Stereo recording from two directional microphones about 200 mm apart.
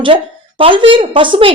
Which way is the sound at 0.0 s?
25° right (ahead or behind).